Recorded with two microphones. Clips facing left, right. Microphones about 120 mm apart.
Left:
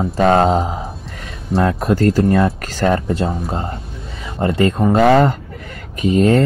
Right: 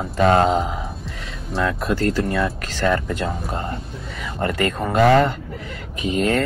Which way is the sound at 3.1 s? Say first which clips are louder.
Left 5 dB; 30° left (ahead or behind).